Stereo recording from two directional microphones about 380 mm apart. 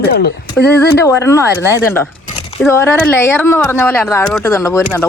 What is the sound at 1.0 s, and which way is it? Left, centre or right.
Speech, centre.